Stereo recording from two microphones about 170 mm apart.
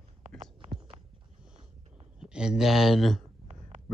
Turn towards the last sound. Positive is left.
turn(degrees=0)  # may be behind; listen again after turning